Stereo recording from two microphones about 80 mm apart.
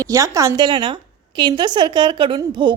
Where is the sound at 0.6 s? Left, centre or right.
Right.